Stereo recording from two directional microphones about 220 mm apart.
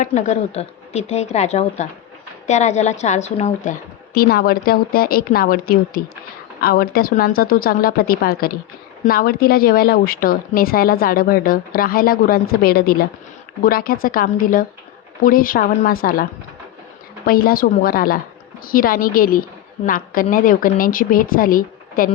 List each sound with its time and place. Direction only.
0.0 s a woman's voice: 35° left (ahead or behind)
17.2 s a woman's voice: 40° left (ahead or behind)